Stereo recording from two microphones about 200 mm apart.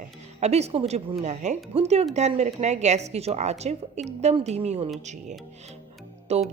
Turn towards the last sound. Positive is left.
turn(degrees=-30)  # may be behind; listen again after turning